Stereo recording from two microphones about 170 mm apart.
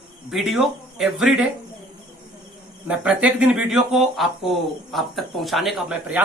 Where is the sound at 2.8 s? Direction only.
5° right (ahead or behind).